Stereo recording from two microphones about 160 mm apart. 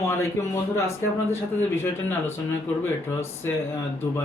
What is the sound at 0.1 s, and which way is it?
A man's voice, 15° left (ahead or behind).